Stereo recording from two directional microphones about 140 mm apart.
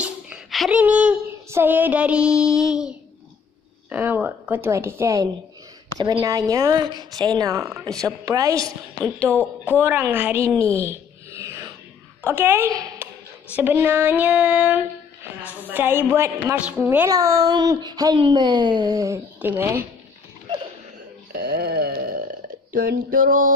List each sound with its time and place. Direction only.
0.0 s a sound: 5° right (ahead or behind)
0.7 s child singing: 10° right (ahead or behind)
3.9 s child singing: 15° right (ahead or behind)
5.9 s a woman's voice: 30° right (ahead or behind)
9.8 s child singing: 15° right (ahead or behind)
10.5 s a woman's voice: 10° left (ahead or behind)
10.8 s a sound: 20° right (ahead or behind)
12.2 s speech: 15° right (ahead or behind)
13.6 s child singing: 15° right (ahead or behind)
16.5 s a woman's voice: 10° right (ahead or behind)
21.3 s wail: 90° right
22.7 s a sound: 80° right